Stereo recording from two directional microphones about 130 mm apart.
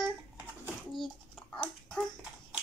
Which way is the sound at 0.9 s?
Centre (ahead or behind).